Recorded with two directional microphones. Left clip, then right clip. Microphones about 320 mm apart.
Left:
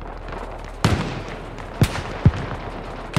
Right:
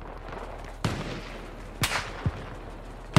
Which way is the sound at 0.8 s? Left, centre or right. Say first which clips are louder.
Left 10 dB; left.